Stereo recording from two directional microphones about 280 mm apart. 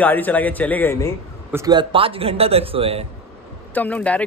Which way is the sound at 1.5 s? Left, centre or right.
Centre.